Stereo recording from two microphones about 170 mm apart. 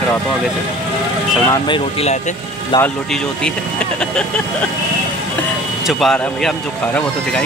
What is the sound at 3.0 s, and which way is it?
Speech, 5° left (ahead or behind).